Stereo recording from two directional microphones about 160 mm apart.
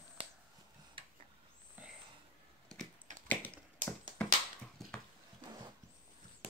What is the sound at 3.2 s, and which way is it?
Tap, 10° left (ahead or behind).